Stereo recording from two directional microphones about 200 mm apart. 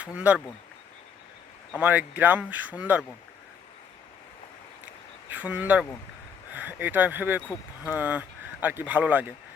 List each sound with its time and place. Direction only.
0.0 s speech: 5° right (ahead or behind)
1.8 s speech: 10° right (ahead or behind)
5.3 s speech: 5° right (ahead or behind)